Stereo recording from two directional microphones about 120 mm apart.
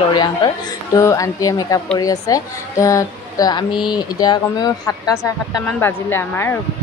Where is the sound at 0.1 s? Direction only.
40° left (ahead or behind).